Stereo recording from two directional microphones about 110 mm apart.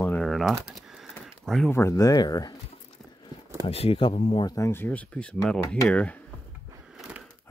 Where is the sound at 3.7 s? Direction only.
60° left (ahead or behind).